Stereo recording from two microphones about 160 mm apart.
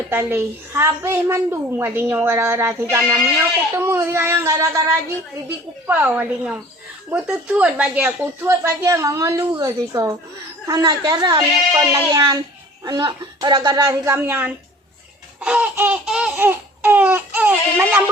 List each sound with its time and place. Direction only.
0.1 s a woman's voice: 15° right (ahead or behind)